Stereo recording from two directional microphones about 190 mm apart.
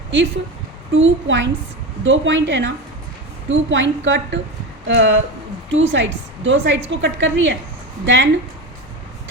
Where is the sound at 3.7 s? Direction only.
75° right (ahead or behind).